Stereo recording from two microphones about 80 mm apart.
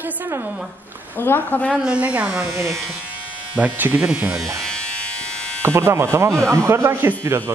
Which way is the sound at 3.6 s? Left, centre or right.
Right.